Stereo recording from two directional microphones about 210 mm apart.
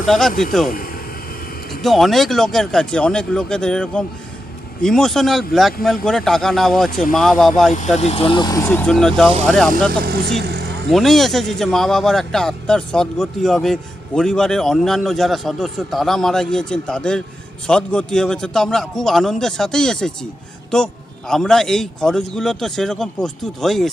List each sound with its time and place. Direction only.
0.1 s speech: centre (ahead or behind)
1.8 s speech: centre (ahead or behind)
7.9 s speech: 30° left (ahead or behind); by 9.7 s 5° left (ahead or behind)
10.0 s vehicle: 50° right (ahead or behind)
10.8 s speech: centre (ahead or behind)